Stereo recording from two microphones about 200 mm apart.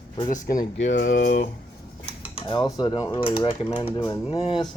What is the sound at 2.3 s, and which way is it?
Cutlery, 25° left (ahead or behind).